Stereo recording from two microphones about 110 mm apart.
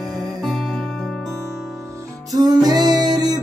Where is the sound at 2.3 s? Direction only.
40° right (ahead or behind).